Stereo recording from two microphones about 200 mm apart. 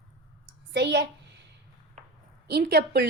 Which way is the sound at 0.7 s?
60° right (ahead or behind).